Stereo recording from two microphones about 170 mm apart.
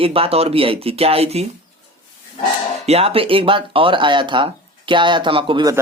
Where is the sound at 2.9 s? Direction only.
35° right (ahead or behind).